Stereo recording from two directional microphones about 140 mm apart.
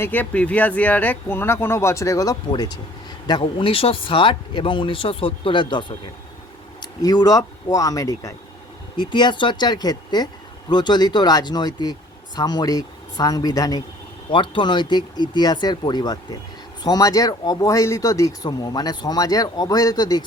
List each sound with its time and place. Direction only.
0.0 s speech: 10° left (ahead or behind); by 5.8 s 35° left (ahead or behind)
7.0 s speech: 30° left (ahead or behind)